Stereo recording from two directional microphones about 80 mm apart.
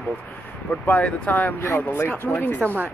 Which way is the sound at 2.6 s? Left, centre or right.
Right.